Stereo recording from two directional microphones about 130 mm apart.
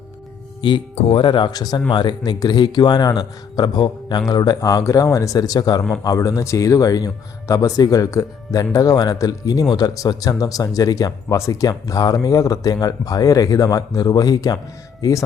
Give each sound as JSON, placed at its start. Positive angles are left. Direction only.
{"t": 1.0, "sound": "a man's voice", "side_deg": 40}